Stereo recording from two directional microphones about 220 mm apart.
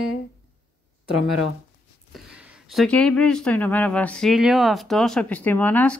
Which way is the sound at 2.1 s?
5° right (ahead or behind).